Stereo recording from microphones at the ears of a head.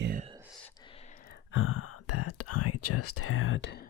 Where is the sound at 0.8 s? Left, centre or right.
Left.